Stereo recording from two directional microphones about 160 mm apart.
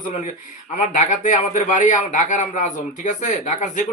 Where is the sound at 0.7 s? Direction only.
50° left (ahead or behind).